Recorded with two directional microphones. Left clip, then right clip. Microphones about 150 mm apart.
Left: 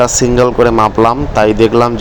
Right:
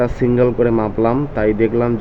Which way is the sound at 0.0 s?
15° left (ahead or behind).